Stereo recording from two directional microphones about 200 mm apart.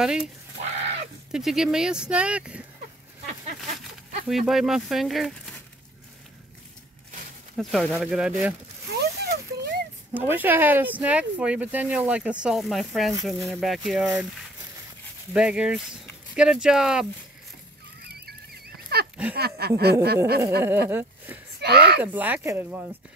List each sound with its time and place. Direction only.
0.0 s speech: 5° right (ahead or behind)
0.6 s a sound: 35° right (ahead or behind)
1.3 s speech: 5° right (ahead or behind)
4.3 s speech: centre (ahead or behind)
7.5 s speech: centre (ahead or behind)
8.9 s a sound: 55° right (ahead or behind)
10.1 s speech: 10° right (ahead or behind)
15.3 s speech: 5° right (ahead or behind)
18.0 s fowl: 50° right (ahead or behind)
19.3 s speech: 50° right (ahead or behind)
21.5 s speech: 55° right (ahead or behind)
22.0 s speech: 10° right (ahead or behind)